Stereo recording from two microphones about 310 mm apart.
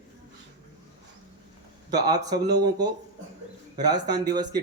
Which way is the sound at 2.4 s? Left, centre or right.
Right.